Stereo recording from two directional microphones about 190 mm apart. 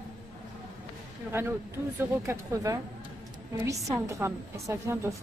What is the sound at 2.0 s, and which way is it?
A woman's voice, 15° right (ahead or behind).